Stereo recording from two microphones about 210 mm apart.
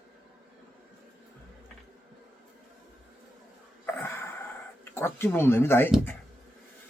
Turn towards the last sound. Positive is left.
turn(degrees=10)  # may be behind; listen again after turning